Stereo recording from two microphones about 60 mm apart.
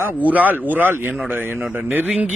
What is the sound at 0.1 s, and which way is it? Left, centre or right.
Speech, right.